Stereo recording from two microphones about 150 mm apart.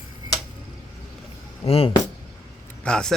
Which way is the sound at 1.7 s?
40° left (ahead or behind).